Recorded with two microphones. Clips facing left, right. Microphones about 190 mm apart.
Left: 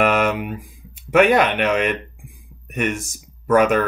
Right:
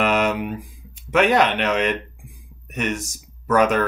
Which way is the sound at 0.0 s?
50° left (ahead or behind).